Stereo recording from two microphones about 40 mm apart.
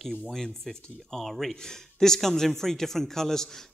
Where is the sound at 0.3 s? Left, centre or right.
Centre.